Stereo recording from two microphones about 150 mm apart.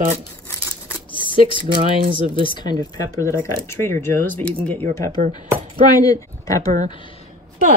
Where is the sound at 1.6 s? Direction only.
35° right (ahead or behind).